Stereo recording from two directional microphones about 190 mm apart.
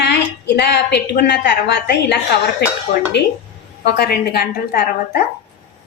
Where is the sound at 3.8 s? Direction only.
55° left (ahead or behind).